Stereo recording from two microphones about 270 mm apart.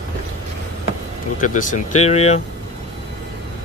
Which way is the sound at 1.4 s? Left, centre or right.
Left.